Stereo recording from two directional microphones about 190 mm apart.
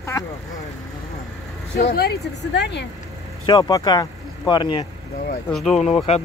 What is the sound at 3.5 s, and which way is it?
Speech, 20° left (ahead or behind).